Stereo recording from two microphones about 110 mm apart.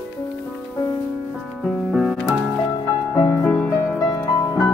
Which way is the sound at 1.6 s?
Centre (ahead or behind).